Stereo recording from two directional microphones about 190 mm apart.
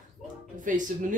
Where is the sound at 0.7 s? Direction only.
45° right (ahead or behind).